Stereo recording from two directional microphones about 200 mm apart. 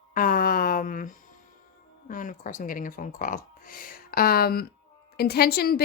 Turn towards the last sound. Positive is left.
turn(degrees=50)  # may be behind; listen again after turning